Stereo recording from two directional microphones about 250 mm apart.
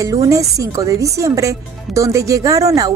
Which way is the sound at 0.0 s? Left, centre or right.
Centre.